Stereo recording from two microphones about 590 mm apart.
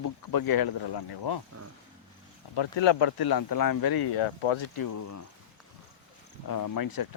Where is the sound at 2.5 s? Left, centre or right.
Left.